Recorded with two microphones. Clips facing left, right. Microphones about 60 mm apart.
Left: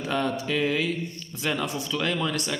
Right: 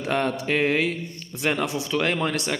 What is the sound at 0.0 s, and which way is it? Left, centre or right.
A man's voice, right.